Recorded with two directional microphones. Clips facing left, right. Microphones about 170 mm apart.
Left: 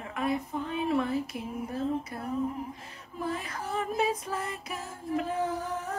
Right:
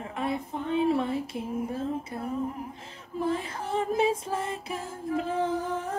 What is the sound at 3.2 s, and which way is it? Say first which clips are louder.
Music: right 4 dB; 30° right (ahead or behind).